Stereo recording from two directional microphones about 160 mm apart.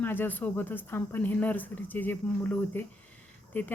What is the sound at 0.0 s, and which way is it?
Speech, 10° left (ahead or behind).